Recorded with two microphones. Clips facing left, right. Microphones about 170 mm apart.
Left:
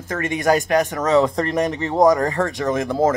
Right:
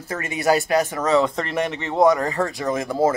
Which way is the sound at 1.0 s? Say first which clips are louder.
Left 2 dB; 35° left (ahead or behind).